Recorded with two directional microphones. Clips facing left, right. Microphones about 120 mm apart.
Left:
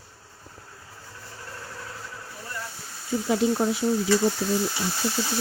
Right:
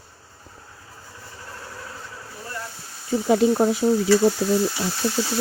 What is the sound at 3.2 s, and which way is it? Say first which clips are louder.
Speech: right 5 dB; 70° right (ahead or behind).